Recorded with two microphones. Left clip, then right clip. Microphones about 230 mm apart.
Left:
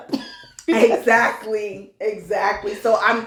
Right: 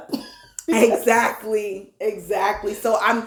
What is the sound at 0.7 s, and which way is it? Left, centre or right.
Speech, right.